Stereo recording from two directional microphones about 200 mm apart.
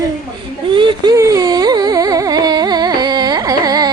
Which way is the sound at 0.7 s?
25° right (ahead or behind).